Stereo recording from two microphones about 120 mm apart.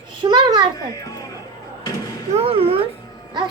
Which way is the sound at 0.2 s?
40° right (ahead or behind).